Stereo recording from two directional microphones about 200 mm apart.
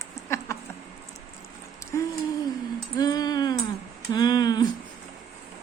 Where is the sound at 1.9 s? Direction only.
15° left (ahead or behind).